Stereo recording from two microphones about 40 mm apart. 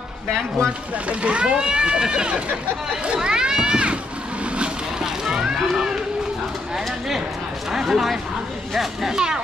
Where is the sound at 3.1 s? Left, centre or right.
Centre.